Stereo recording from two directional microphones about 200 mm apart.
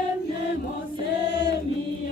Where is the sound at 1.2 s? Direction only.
55° left (ahead or behind).